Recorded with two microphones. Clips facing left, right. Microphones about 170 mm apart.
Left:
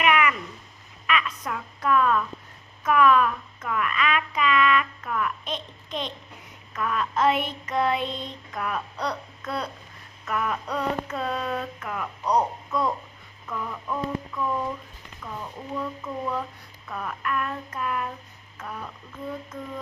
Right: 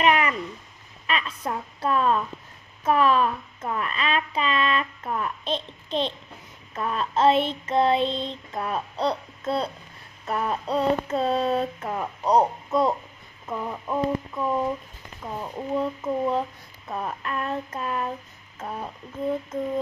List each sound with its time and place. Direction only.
0.0 s a sound: 35° right (ahead or behind)
1.0 s a woman's voice: 30° right (ahead or behind)
6.7 s child singing: 30° right (ahead or behind)